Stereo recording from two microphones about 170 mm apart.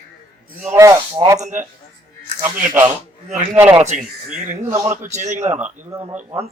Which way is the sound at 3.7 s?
40° right (ahead or behind).